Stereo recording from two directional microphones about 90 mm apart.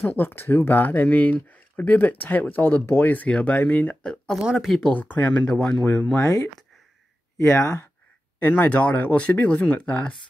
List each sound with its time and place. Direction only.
0.1 s speech: 20° left (ahead or behind)
4.4 s speech: 10° right (ahead or behind)
4.6 s speech: 5° left (ahead or behind)
4.9 s speech: 20° left (ahead or behind)
6.2 s speech: 35° left (ahead or behind)
8.4 s speech: 20° left (ahead or behind)